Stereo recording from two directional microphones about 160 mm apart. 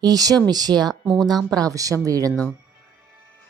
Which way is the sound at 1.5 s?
20° right (ahead or behind).